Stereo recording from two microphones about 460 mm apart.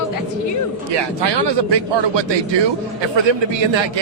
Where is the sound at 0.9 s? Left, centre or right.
Right.